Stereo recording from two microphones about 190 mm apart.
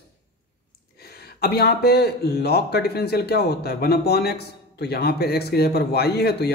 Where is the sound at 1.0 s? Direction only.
55° left (ahead or behind).